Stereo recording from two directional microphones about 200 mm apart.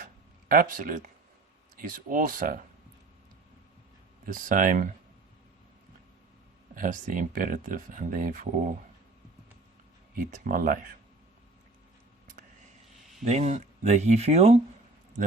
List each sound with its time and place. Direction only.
0.0 s a sound: 45° right (ahead or behind)
1.7 s speech: 40° right (ahead or behind)
4.3 s speech: 40° right (ahead or behind)
6.7 s speech: 40° right (ahead or behind)
10.2 s speech: 45° right (ahead or behind)
13.2 s speech: 35° right (ahead or behind)